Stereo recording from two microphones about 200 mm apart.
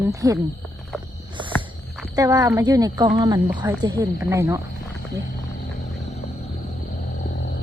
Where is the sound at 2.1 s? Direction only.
15° right (ahead or behind).